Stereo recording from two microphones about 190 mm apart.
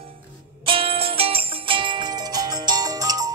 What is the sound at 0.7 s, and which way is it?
Music, 30° right (ahead or behind).